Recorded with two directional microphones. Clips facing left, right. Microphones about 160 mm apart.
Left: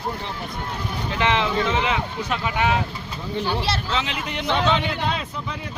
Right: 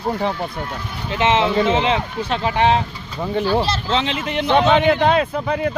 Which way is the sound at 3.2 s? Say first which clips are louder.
Right 7 dB; 55° right (ahead or behind).